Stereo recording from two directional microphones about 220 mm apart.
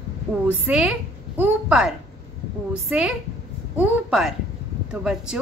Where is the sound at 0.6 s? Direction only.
5° right (ahead or behind).